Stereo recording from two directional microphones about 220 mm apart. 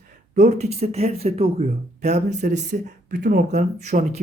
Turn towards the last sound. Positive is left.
turn(degrees=-30)  # may be behind; listen again after turning